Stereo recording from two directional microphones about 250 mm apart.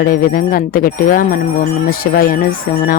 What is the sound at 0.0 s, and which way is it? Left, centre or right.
Speech, left.